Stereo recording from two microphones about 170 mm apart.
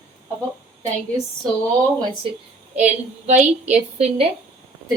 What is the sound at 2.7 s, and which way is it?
A woman's voice, 40° right (ahead or behind).